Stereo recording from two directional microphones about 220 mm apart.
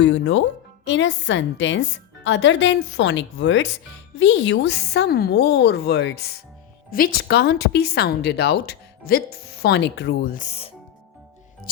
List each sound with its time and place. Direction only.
0.0 s a woman's voice: 60° left (ahead or behind); by 10.7 s 30° left (ahead or behind)